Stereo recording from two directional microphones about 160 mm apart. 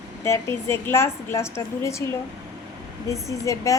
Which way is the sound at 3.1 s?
20° left (ahead or behind).